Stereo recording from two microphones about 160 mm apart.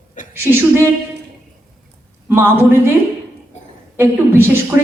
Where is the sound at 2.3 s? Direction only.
15° right (ahead or behind).